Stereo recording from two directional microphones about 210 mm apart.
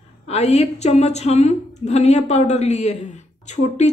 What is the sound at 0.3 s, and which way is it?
Speech, 30° left (ahead or behind).